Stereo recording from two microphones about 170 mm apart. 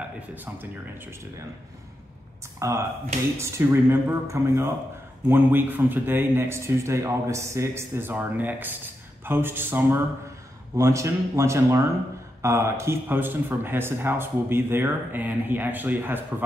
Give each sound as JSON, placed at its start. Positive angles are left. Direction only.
{"t": 0.3, "sound": "a man's voice", "side_deg": -10}
{"t": 2.6, "sound": "a man's voice", "side_deg": -15}